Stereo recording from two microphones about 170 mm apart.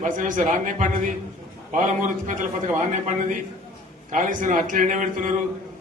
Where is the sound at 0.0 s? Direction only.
50° right (ahead or behind).